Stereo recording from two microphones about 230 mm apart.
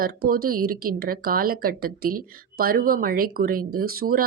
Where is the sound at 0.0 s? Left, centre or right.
Right.